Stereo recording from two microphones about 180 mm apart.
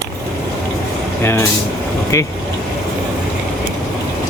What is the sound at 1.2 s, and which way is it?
Speech, 15° left (ahead or behind).